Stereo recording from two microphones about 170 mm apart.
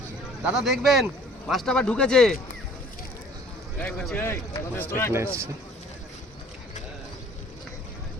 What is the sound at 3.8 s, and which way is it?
Speech, 5° left (ahead or behind).